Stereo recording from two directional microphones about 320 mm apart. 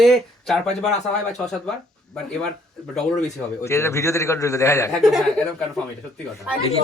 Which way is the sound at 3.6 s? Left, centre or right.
Centre.